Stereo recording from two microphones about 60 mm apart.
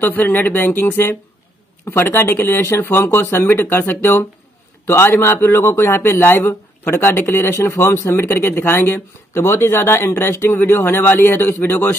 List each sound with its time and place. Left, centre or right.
0.0 s a man's voice: left